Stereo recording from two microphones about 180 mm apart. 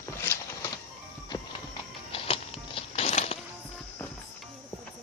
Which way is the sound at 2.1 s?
30° left (ahead or behind).